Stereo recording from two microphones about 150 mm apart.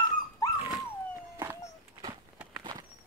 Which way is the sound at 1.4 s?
25° right (ahead or behind).